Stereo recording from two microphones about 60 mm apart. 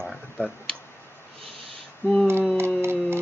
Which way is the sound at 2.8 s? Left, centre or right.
Right.